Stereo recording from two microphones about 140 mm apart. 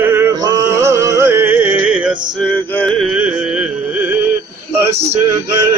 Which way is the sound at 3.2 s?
10° right (ahead or behind).